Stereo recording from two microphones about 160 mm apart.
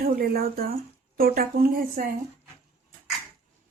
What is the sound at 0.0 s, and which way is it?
Speech, 65° right (ahead or behind).